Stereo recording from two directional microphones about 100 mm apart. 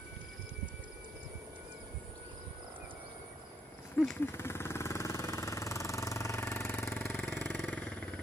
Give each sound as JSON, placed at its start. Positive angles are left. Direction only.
{"t": 4.2, "sound": "jackhammer", "side_deg": 25}
{"t": 7.1, "sound": "vehicle", "side_deg": 15}